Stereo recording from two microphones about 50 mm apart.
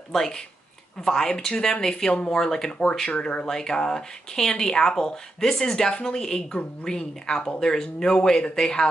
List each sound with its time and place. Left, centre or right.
0.1 s speech: centre
3.1 s speech: left
3.4 s speech: centre